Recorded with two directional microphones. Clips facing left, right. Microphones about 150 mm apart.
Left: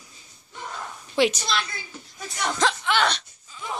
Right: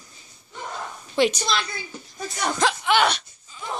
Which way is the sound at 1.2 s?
5° left (ahead or behind).